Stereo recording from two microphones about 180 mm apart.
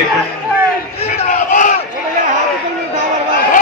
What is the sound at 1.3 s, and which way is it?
Crowd, 45° left (ahead or behind).